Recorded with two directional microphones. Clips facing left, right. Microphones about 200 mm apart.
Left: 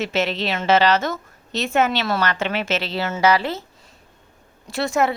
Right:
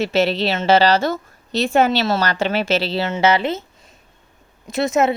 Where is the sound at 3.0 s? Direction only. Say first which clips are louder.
Left 1 dB; 20° right (ahead or behind).